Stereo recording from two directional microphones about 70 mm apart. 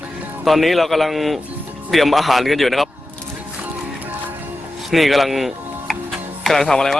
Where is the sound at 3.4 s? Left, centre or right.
Centre.